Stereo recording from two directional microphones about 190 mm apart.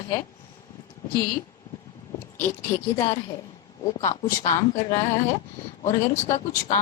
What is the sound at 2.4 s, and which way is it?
Speech, 15° left (ahead or behind).